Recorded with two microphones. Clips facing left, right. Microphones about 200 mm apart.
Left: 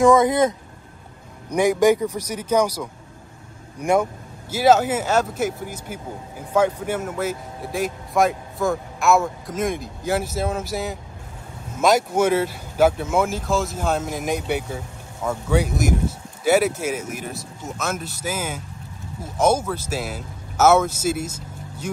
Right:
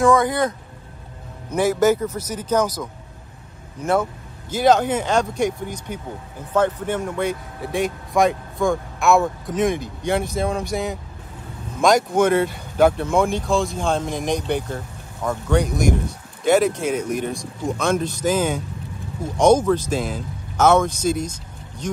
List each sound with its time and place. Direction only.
0.0 s speech: 20° left (ahead or behind)